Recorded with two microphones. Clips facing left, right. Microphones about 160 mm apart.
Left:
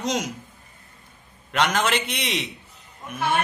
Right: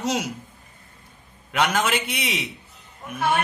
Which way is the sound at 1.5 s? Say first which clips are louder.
Even; 10° right (ahead or behind).